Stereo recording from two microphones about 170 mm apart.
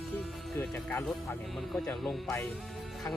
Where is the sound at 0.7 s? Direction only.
10° left (ahead or behind).